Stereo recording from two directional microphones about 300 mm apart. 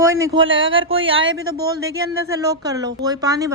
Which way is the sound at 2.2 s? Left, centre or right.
Centre.